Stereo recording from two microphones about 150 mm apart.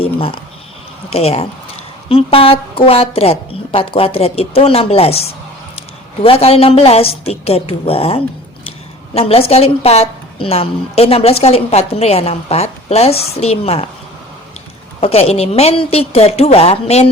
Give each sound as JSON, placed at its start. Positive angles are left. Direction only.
{"t": 0.0, "sound": "a sound", "side_deg": 40}
{"t": 1.1, "sound": "a woman's voice", "side_deg": 40}
{"t": 6.2, "sound": "a woman's voice", "side_deg": 40}
{"t": 15.0, "sound": "a woman's voice", "side_deg": 40}